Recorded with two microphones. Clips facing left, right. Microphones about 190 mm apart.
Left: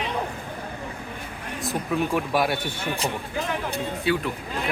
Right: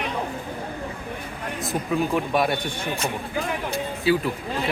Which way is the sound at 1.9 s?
Centre (ahead or behind).